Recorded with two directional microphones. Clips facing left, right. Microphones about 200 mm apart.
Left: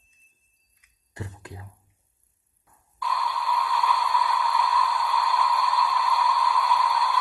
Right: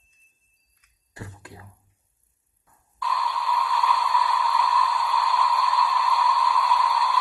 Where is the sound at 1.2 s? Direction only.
20° left (ahead or behind).